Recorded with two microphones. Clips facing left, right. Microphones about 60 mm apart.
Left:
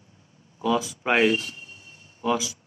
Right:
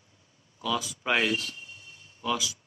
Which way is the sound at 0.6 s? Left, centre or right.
Left.